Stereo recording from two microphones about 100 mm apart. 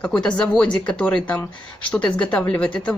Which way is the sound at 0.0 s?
10° left (ahead or behind).